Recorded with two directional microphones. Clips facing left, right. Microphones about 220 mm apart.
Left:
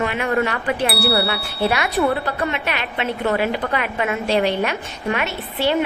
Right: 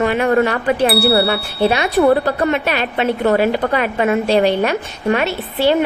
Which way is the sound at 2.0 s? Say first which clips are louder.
Right 8 dB; 40° right (ahead or behind).